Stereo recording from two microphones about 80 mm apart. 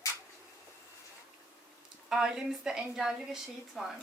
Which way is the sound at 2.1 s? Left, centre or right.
Centre.